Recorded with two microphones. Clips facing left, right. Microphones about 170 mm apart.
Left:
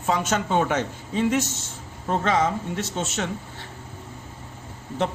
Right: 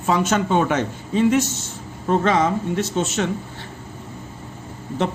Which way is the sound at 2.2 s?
70° right (ahead or behind).